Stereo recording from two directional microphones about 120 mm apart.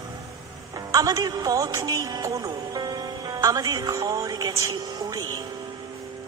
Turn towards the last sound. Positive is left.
turn(degrees=-35)  # may be behind; listen again after turning